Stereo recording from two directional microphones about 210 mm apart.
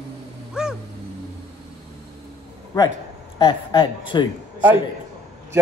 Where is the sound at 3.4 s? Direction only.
25° left (ahead or behind).